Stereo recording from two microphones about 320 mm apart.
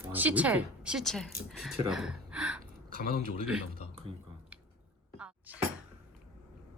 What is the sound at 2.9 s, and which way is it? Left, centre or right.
Speech, right.